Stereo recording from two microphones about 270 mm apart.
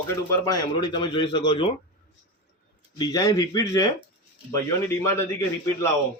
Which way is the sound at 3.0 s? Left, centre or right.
Centre.